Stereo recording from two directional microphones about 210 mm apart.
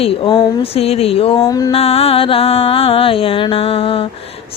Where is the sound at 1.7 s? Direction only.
30° left (ahead or behind).